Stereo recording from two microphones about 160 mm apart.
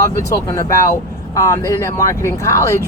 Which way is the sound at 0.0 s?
20° left (ahead or behind).